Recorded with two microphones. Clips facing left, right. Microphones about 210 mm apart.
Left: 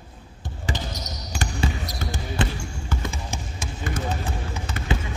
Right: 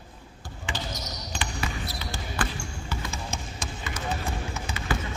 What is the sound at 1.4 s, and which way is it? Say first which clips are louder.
Trickle: left 6 dB; 45° left (ahead or behind).